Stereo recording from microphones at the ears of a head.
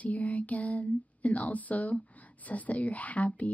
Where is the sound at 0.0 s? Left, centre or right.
Centre.